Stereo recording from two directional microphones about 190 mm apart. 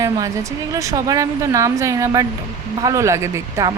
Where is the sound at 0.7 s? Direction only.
15° right (ahead or behind).